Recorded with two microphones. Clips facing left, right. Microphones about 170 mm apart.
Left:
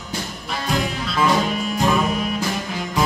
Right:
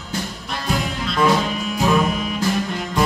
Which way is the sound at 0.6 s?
Centre (ahead or behind).